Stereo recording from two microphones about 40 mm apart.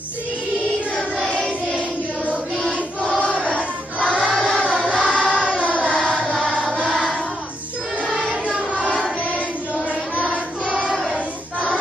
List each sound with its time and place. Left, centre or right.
4.0 s choir: right
4.4 s music: centre
4.6 s music: right
5.1 s choir: left
8.5 s a sound: right